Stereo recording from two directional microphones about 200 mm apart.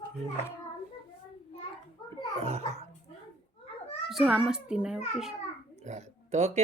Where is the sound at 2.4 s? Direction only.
30° right (ahead or behind).